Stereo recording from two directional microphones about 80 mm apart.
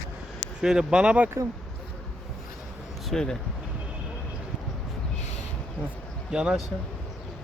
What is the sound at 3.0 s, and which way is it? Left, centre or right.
Speech, centre.